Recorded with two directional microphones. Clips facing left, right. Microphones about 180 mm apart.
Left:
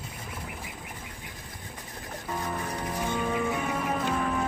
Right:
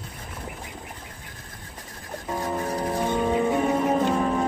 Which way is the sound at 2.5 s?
30° right (ahead or behind).